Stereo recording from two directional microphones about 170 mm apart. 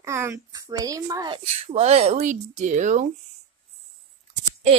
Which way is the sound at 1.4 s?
40° right (ahead or behind).